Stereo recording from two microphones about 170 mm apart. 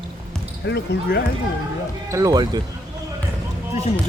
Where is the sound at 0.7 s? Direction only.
85° left.